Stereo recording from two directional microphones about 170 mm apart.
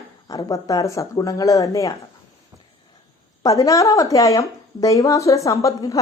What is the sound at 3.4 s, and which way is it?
Speech, 20° left (ahead or behind).